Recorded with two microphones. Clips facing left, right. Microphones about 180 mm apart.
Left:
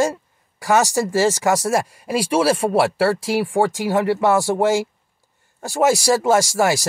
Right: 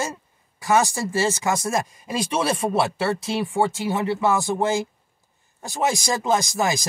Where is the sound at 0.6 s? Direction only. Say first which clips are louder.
Left 3 dB; 80° left.